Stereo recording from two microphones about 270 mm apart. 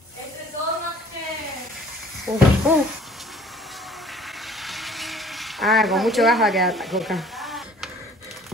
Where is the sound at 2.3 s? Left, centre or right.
Centre.